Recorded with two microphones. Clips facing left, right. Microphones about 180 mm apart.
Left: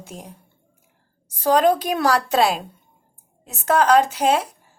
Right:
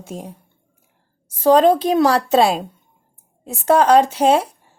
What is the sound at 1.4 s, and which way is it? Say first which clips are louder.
Speech: right 4 dB; 25° right (ahead or behind).